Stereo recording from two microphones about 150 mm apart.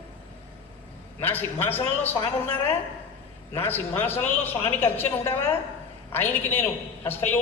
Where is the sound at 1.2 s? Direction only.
15° left (ahead or behind).